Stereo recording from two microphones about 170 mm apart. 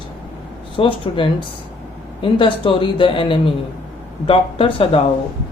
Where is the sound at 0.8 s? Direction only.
30° left (ahead or behind).